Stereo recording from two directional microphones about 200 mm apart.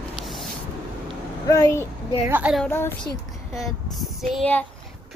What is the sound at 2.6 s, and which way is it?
A woman's voice, 10° left (ahead or behind).